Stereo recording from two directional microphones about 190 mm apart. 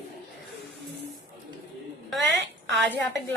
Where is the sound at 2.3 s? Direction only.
70° right (ahead or behind).